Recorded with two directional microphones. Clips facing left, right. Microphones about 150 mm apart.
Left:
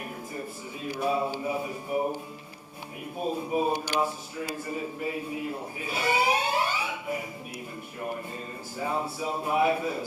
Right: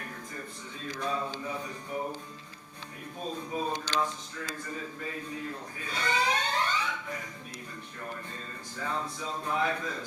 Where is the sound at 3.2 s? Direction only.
10° left (ahead or behind).